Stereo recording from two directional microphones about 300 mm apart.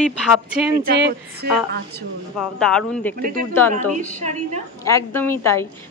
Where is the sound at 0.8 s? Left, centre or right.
Right.